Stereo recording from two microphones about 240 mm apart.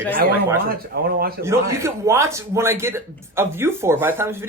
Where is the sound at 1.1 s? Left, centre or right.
Right.